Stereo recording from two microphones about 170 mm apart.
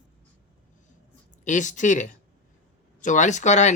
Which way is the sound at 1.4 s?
45° left (ahead or behind).